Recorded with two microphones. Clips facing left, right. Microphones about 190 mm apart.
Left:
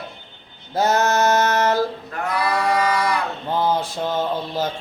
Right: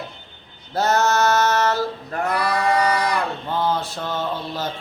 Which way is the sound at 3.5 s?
10° left (ahead or behind).